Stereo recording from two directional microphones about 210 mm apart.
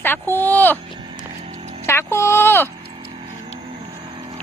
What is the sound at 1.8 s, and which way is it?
Speech, 10° left (ahead or behind).